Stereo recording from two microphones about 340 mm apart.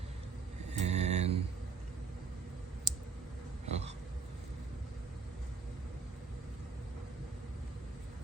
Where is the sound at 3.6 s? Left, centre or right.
Centre.